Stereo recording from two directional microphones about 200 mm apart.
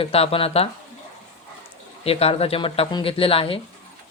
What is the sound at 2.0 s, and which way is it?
Speech, 30° left (ahead or behind).